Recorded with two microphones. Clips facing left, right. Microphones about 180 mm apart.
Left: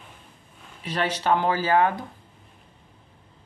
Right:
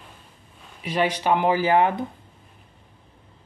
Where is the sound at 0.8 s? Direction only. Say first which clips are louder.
Right 2 dB; 10° right (ahead or behind).